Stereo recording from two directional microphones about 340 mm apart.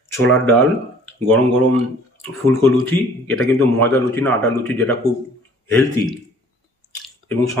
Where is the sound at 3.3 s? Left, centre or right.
Centre.